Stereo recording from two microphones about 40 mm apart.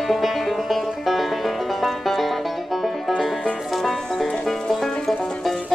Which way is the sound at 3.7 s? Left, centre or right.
Centre.